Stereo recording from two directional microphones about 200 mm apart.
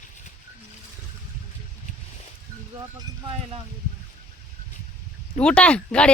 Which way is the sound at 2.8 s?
25° right (ahead or behind).